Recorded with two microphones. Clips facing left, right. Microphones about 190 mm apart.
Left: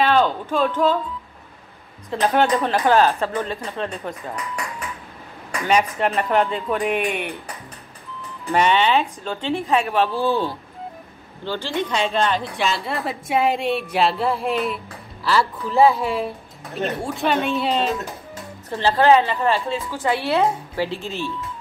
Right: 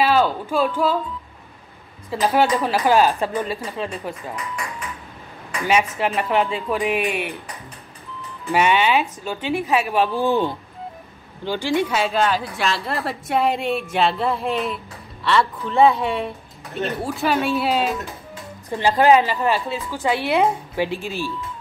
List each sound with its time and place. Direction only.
0.0 s speech: 5° right (ahead or behind)
2.0 s a woman's voice: 5° right (ahead or behind)
5.7 s a woman's voice: 5° right (ahead or behind)
8.5 s a woman's voice: 10° right (ahead or behind)